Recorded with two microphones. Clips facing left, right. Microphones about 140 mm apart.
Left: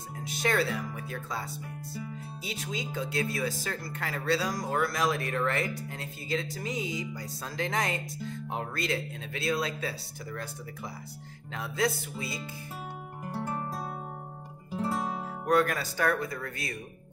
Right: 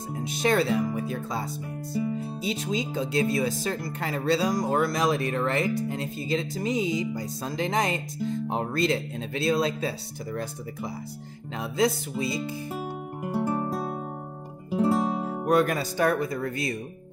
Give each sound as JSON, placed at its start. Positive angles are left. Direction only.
{"t": 0.1, "sound": "speech", "side_deg": -20}
{"t": 13.2, "sound": "music", "side_deg": -10}
{"t": 14.7, "sound": "music", "side_deg": -15}
{"t": 15.1, "sound": "speech", "side_deg": -20}